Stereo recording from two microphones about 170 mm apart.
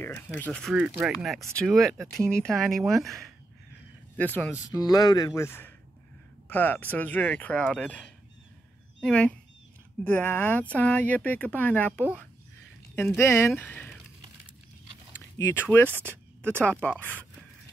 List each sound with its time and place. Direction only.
0.4 s speech: 5° left (ahead or behind)
4.6 s speech: 20° left (ahead or behind)
15.1 s speech: 15° left (ahead or behind)